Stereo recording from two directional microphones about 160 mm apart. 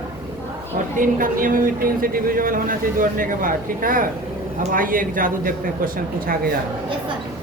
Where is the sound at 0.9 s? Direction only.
60° right (ahead or behind).